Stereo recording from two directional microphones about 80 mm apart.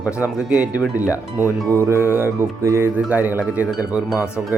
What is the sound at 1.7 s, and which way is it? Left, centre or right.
Music, right.